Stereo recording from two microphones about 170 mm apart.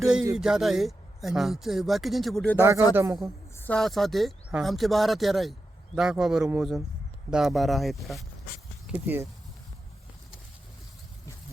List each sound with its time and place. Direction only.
0.0 s speech: 5° right (ahead or behind)
2.6 s speech: 15° right (ahead or behind)
3.5 s speech: 10° left (ahead or behind)
8.9 s speech: 10° right (ahead or behind)